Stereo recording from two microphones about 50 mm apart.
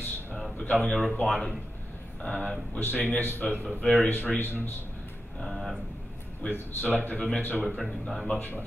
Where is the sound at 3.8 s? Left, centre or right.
Centre.